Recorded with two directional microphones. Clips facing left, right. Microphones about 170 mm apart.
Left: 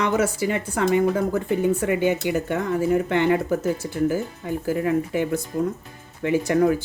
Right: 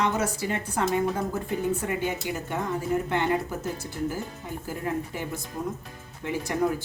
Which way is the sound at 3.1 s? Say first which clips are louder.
Left 6 dB; 90° left.